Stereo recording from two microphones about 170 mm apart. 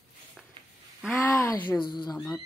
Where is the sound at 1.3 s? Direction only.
15° left (ahead or behind).